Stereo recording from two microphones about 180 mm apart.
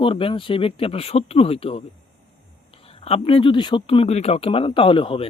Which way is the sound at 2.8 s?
35° left (ahead or behind).